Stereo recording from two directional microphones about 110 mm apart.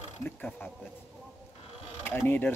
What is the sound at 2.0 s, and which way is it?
Speech, 20° left (ahead or behind).